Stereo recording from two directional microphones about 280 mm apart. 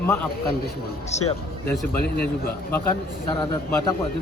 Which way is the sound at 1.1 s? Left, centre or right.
Left.